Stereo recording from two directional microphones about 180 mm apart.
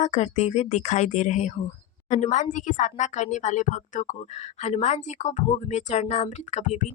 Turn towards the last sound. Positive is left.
turn(degrees=40)  # may be behind; listen again after turning